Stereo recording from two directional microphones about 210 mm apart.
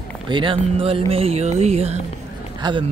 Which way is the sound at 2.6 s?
20° right (ahead or behind).